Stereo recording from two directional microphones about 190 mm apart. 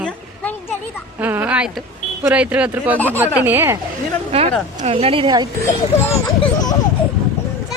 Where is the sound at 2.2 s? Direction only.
5° right (ahead or behind).